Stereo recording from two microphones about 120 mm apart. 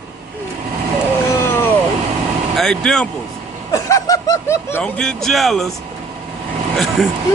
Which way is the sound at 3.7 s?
30° left (ahead or behind).